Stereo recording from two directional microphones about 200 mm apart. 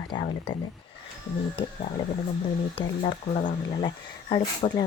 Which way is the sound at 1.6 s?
25° left (ahead or behind).